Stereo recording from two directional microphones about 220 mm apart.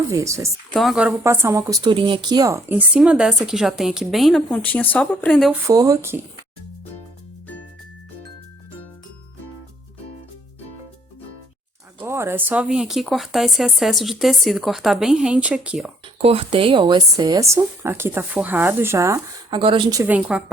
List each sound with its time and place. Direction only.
0.1 s speech: 15° right (ahead or behind)
0.7 s speech: centre (ahead or behind)
5.6 s speech: 15° right (ahead or behind)
11.9 s speech: 10° right (ahead or behind)
16.1 s speech: 25° right (ahead or behind); by 20.4 s 5° right (ahead or behind)